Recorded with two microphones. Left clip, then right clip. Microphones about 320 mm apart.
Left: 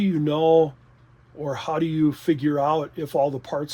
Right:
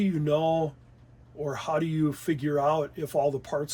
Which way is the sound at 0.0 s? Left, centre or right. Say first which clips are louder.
Left 4 dB; left.